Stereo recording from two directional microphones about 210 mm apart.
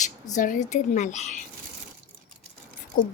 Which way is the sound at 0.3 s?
40° left (ahead or behind).